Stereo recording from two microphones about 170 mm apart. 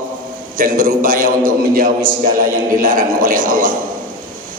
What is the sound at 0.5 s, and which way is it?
A man's voice, 55° right (ahead or behind).